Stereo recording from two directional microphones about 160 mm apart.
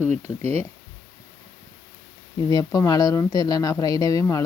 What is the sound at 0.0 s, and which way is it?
Speech, 45° right (ahead or behind).